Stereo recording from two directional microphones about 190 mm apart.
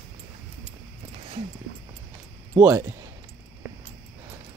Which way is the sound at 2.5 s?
10° right (ahead or behind).